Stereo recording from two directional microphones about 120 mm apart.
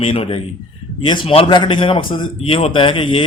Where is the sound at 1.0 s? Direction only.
40° left (ahead or behind).